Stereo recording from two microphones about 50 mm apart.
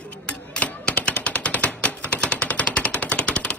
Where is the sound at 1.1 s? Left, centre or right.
Left.